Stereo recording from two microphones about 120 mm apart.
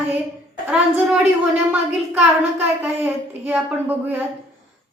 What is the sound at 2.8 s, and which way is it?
A woman's voice, 15° right (ahead or behind).